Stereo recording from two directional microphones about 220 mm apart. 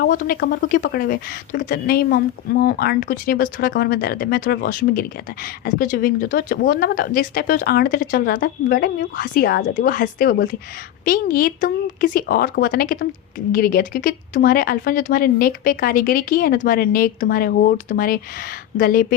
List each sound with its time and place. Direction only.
0.0 s speech: 40° left (ahead or behind)